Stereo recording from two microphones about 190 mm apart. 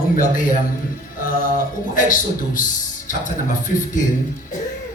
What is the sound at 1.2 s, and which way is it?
A man's voice, 45° left (ahead or behind).